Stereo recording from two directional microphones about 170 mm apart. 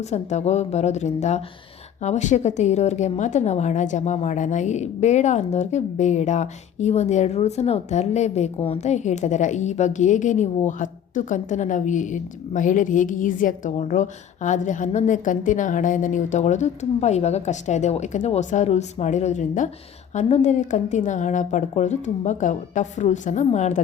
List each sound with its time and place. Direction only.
0.1 s a woman's voice: 40° left (ahead or behind)